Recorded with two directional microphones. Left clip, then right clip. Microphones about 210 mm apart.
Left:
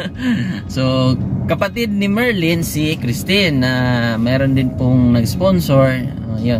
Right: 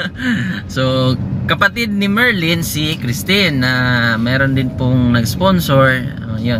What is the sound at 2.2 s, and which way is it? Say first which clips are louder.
Speech: right 2 dB; 55° right (ahead or behind).